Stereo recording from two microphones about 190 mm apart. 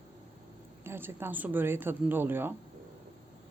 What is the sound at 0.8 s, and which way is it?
Speech, 10° right (ahead or behind).